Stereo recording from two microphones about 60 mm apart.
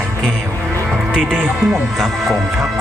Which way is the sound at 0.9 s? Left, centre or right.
Centre.